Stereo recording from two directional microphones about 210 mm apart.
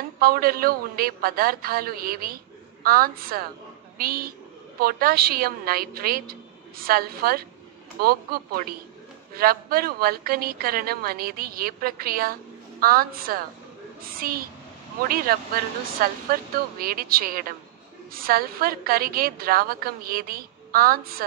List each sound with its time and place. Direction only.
0.2 s a man's voice: 45° right (ahead or behind)